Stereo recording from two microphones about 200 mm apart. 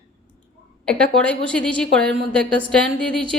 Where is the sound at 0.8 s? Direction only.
5° left (ahead or behind).